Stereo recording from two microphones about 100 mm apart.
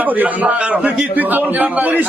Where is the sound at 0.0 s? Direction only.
15° right (ahead or behind).